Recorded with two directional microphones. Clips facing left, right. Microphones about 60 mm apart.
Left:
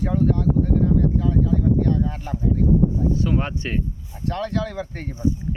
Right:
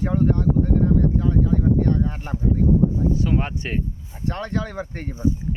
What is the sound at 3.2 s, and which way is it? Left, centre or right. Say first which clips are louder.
Speech: even; centre.